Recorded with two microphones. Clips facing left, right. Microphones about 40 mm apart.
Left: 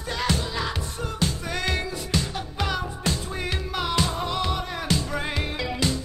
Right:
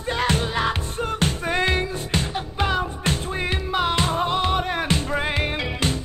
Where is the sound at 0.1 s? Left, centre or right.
Right.